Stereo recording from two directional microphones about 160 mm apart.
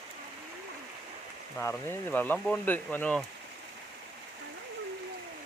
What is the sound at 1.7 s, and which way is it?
Speech, 10° left (ahead or behind).